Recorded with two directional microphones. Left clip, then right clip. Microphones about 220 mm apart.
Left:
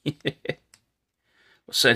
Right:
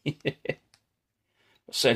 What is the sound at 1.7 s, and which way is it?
Speech, 20° left (ahead or behind).